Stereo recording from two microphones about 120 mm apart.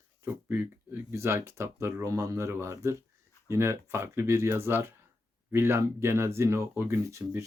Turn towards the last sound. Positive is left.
turn(degrees=-25)  # may be behind; listen again after turning